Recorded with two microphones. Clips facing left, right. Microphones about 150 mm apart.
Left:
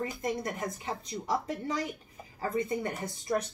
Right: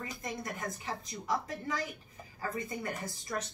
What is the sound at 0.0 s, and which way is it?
A woman's voice, 30° left (ahead or behind).